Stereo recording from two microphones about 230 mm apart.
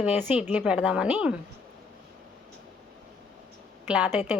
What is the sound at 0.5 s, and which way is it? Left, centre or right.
Speech, centre.